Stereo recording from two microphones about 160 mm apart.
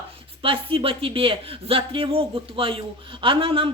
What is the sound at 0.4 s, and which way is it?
Speech, 35° right (ahead or behind).